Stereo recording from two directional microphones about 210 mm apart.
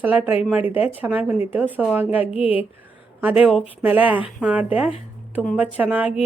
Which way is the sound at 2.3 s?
25° left (ahead or behind).